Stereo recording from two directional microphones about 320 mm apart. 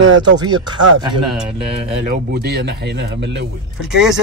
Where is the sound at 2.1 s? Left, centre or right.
Right.